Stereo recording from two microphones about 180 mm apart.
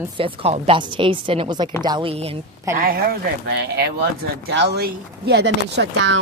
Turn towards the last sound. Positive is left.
turn(degrees=-80)